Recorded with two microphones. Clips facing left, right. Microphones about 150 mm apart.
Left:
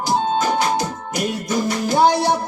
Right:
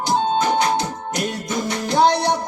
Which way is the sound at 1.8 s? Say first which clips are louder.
Even; 5° left (ahead or behind).